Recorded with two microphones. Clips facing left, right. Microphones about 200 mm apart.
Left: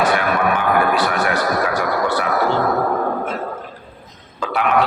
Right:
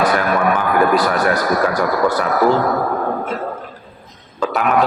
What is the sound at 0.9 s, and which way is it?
Speech, 40° right (ahead or behind).